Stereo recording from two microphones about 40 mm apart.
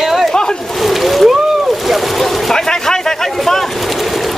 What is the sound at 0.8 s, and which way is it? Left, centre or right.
Speech, centre.